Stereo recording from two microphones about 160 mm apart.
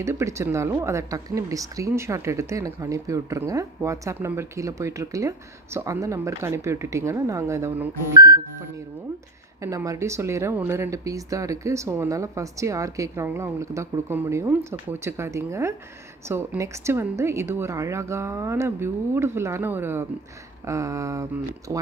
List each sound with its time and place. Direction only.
0.0 s speech: 20° right (ahead or behind)
9.6 s speech: 20° right (ahead or behind)